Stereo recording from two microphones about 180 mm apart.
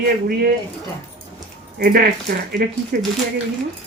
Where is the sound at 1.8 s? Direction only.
55° right (ahead or behind).